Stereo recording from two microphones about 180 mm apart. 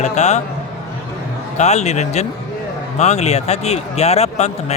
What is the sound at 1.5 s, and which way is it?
Speech, 40° left (ahead or behind).